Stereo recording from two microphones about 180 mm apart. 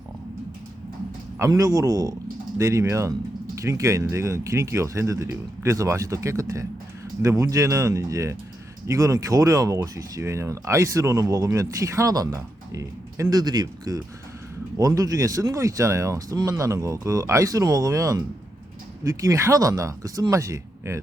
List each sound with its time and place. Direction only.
1.4 s speech: 20° right (ahead or behind)